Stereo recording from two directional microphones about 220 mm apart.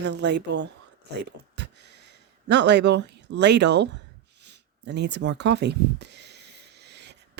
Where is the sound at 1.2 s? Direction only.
50° right (ahead or behind).